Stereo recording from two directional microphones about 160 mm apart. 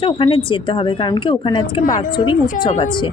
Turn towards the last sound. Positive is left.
turn(degrees=30)  # may be behind; listen again after turning